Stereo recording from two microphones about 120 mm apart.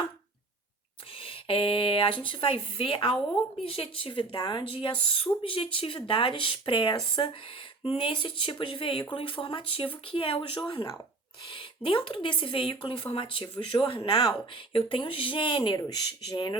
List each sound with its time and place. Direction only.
1.2 s speech: 50° left (ahead or behind)